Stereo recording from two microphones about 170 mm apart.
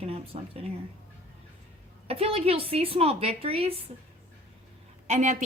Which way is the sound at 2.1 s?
35° right (ahead or behind).